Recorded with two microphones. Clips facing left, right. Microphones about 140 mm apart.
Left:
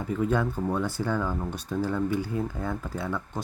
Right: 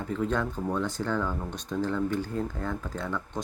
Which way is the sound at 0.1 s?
10° left (ahead or behind).